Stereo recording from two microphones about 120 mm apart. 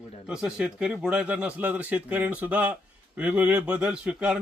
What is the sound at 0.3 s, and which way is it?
Speech, 5° right (ahead or behind).